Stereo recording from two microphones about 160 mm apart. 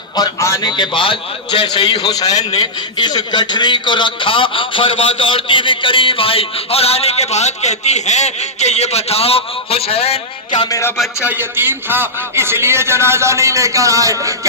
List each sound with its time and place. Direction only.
0.2 s a man's voice: 20° left (ahead or behind)
11.2 s a man's voice: 10° right (ahead or behind)